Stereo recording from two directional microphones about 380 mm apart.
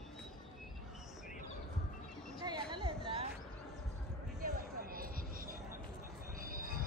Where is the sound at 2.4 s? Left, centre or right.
Centre.